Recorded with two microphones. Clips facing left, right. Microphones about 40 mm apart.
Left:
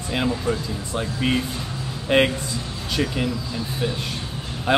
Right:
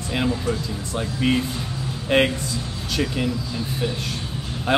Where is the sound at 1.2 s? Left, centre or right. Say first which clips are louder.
Right 3 dB; centre.